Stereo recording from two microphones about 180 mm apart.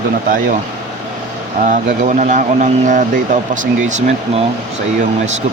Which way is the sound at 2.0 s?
45° right (ahead or behind).